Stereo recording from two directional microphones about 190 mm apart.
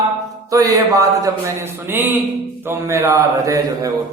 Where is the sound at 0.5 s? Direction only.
15° right (ahead or behind).